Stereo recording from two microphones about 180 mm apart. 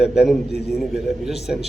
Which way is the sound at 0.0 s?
Centre (ahead or behind).